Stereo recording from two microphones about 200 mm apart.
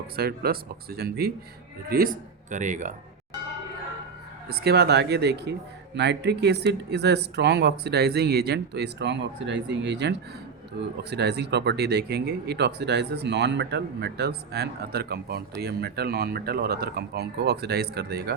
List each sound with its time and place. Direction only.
0.2 s speech: 50° right (ahead or behind)
4.4 s speech: 55° right (ahead or behind)